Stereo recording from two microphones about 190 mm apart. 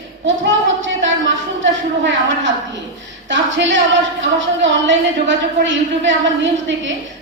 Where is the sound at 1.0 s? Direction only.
80° right.